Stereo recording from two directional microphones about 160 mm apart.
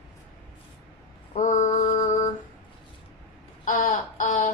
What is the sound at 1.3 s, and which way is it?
Mantra, 50° left (ahead or behind).